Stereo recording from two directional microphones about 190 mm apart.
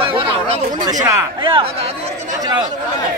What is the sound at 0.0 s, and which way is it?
Chatter, 30° right (ahead or behind).